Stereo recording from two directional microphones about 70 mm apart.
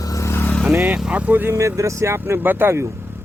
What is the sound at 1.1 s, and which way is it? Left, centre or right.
Speech, right.